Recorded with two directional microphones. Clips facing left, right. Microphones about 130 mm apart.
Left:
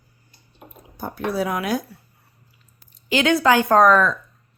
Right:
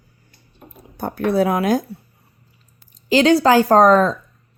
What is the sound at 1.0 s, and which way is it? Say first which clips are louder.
Speech: right 6 dB; 60° right (ahead or behind).